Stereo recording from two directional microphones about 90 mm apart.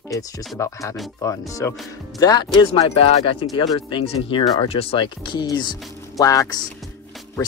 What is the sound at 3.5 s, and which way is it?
Speech, 75° left (ahead or behind).